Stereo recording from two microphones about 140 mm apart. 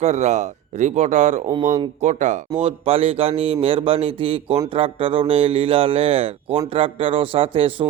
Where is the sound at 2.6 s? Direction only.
45° right (ahead or behind).